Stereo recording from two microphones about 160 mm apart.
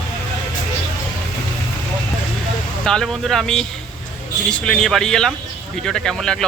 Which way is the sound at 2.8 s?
5° left (ahead or behind).